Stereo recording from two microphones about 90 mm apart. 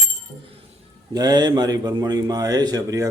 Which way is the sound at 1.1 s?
50° right (ahead or behind).